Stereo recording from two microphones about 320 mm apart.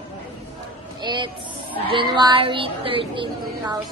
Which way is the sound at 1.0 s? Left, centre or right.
Centre.